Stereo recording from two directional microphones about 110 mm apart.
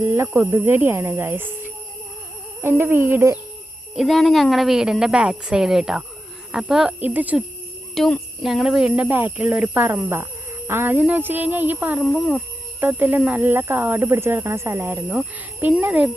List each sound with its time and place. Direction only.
0.0 s speech: 25° right (ahead or behind)
3.9 s a woman's voice: centre (ahead or behind); by 7.4 s 15° right (ahead or behind)
7.9 s a woman's voice: 5° left (ahead or behind)
9.0 s speech: 20° right (ahead or behind)
12.0 s a woman's voice: 5° right (ahead or behind)
12.8 s speech: 15° right (ahead or behind)